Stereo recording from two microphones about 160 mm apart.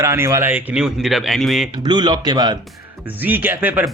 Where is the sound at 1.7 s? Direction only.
25° right (ahead or behind).